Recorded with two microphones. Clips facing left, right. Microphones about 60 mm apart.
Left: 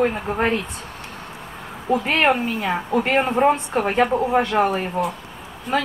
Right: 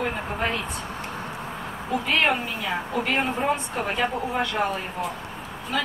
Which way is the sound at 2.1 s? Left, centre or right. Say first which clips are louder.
Left 3 dB; left.